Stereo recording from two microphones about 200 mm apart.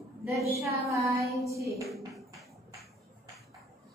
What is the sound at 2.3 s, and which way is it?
Music, centre (ahead or behind).